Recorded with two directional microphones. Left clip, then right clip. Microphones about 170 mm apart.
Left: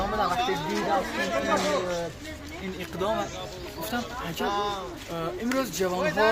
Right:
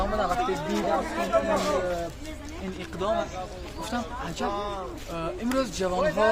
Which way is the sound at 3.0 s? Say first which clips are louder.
Right 1 dB; 20° left (ahead or behind).